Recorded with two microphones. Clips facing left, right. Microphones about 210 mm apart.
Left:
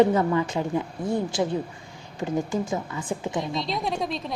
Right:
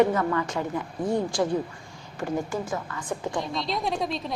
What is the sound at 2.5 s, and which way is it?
Speech, 20° left (ahead or behind).